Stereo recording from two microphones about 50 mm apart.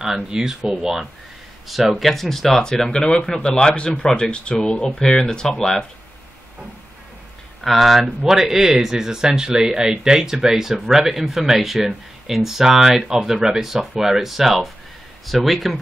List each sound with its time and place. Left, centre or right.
0.0 s speech: centre
1.7 s speech: centre
7.6 s speech: centre